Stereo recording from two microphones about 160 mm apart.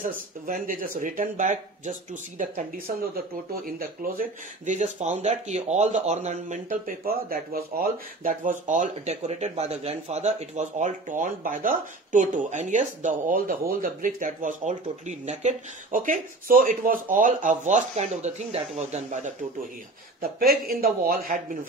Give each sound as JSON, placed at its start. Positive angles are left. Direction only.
{"t": 0.0, "sound": "speech", "side_deg": -60}
{"t": 3.6, "sound": "speech", "side_deg": -60}
{"t": 7.1, "sound": "speech", "side_deg": -70}
{"t": 20.2, "sound": "speech", "side_deg": -65}